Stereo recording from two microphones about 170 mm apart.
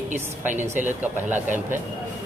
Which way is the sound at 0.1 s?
10° right (ahead or behind).